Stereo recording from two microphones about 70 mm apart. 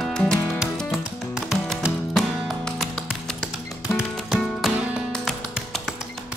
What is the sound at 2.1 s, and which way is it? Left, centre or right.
Music, centre.